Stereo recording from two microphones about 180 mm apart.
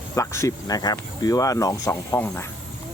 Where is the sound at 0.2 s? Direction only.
15° left (ahead or behind).